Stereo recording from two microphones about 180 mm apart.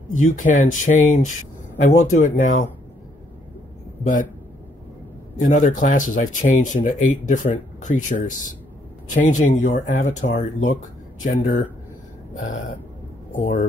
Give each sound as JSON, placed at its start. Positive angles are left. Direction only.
{"t": 0.1, "sound": "speech", "side_deg": 45}
{"t": 4.0, "sound": "speech", "side_deg": 45}
{"t": 5.4, "sound": "speech", "side_deg": 45}
{"t": 13.3, "sound": "speech", "side_deg": 45}